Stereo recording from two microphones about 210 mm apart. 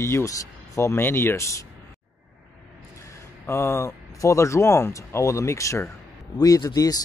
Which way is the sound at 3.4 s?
10° left (ahead or behind).